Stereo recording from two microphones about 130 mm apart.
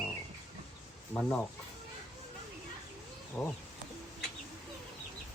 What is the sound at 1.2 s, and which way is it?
Speech, 5° left (ahead or behind).